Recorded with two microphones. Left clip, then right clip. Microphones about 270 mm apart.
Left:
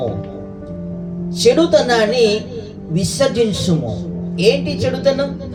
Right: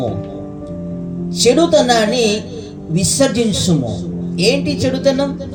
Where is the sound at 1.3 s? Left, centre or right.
Right.